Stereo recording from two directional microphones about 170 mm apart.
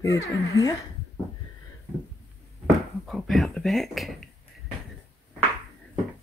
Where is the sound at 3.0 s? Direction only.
Centre (ahead or behind).